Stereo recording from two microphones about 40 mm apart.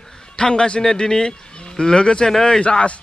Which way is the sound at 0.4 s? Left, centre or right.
Left.